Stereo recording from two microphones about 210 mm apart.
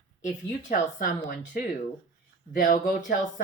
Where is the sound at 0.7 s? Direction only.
40° left (ahead or behind).